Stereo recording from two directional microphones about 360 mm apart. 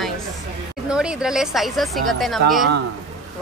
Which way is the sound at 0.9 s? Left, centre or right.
Centre.